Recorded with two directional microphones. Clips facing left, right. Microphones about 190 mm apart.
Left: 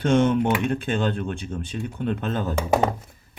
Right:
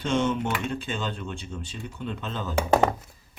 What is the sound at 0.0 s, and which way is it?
Speech, 55° left (ahead or behind).